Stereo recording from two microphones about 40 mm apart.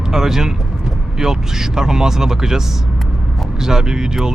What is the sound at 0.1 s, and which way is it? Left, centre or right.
Speech, centre.